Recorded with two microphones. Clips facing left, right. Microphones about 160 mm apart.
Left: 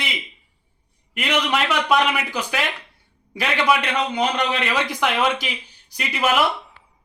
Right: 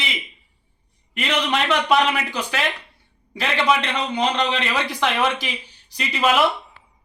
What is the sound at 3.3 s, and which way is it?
A man's voice, 10° left (ahead or behind).